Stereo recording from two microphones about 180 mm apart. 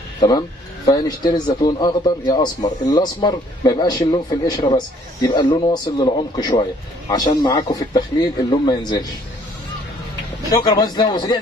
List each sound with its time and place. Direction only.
0.2 s speech: 20° left (ahead or behind)
10.5 s speech: 20° left (ahead or behind)